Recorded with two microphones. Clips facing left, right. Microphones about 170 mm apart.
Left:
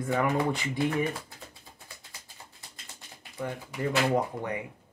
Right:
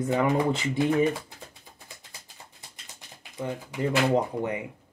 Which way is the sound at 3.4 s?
20° right (ahead or behind).